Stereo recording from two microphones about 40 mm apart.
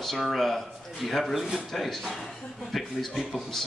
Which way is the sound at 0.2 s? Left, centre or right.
Centre.